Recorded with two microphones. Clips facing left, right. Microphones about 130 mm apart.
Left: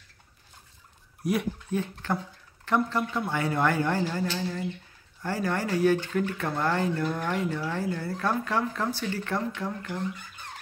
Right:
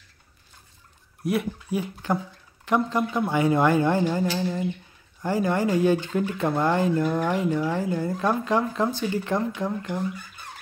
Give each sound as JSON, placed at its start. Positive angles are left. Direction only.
{"t": 1.2, "sound": "speech", "side_deg": 0}
{"t": 1.7, "sound": "speech", "side_deg": -15}